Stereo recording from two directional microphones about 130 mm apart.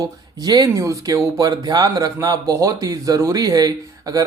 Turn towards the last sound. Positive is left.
turn(degrees=-30)  # may be behind; listen again after turning